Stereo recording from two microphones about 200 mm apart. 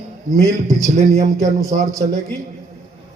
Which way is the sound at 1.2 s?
15° right (ahead or behind).